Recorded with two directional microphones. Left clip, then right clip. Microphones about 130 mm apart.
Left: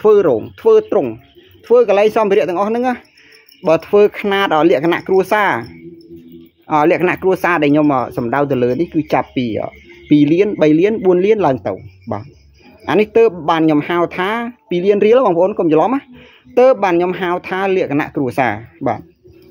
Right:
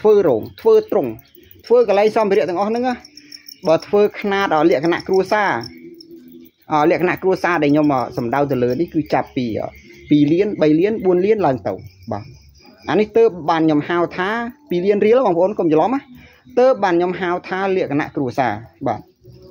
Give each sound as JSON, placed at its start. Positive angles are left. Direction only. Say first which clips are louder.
{"t": 0.0, "sound": "a man's voice", "louder": "left 2 dB", "side_deg": 10}
{"t": 6.7, "sound": "speech", "louder": "left 3 dB", "side_deg": 20}